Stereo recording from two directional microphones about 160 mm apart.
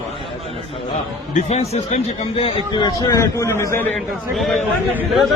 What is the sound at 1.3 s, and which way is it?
Speech, 45° left (ahead or behind).